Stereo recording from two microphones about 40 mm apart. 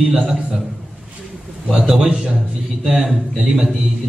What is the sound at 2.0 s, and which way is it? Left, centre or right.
A man's voice, centre.